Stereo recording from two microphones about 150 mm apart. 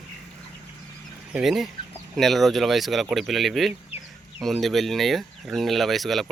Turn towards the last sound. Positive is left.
turn(degrees=0)  # may be behind; listen again after turning